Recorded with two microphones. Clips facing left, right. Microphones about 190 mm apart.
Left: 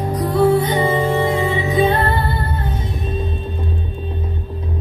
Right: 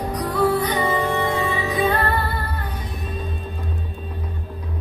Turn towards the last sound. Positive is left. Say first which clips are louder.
# left 6 dB
turn(degrees=25)  # may be behind; listen again after turning